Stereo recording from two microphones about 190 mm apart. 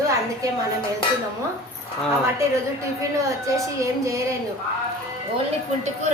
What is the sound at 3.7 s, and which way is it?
Speech, 15° right (ahead or behind).